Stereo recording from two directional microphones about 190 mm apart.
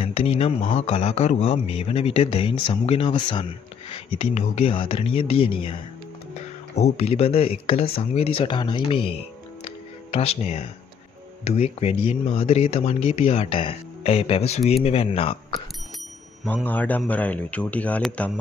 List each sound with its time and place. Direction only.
0.0 s a sound: 30° left (ahead or behind)
0.7 s speech: 35° left (ahead or behind)
16.6 s speech: 10° left (ahead or behind)